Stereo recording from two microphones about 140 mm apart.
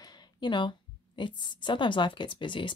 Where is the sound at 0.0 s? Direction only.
30° left (ahead or behind).